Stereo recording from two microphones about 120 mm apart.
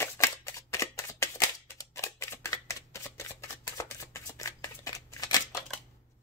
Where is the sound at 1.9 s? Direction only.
25° left (ahead or behind).